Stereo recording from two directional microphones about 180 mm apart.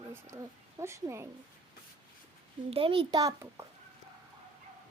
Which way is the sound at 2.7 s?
30° right (ahead or behind).